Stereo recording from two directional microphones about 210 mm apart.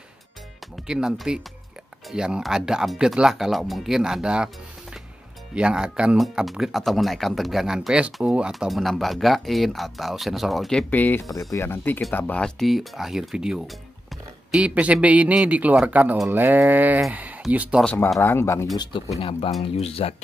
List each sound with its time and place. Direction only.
0.8 s speech: 5° right (ahead or behind)
5.5 s a man's voice: 5° right (ahead or behind)
17.8 s speech: 5° left (ahead or behind)
19.1 s speech: 25° left (ahead or behind)